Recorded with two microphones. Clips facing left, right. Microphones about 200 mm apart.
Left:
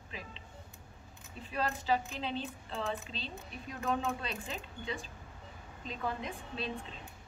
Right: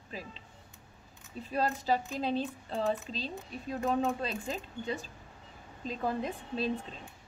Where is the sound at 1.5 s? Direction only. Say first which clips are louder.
Right 3 dB; 40° right (ahead or behind).